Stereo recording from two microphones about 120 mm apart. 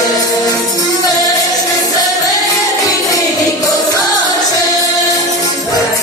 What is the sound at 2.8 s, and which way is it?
Music, 30° left (ahead or behind).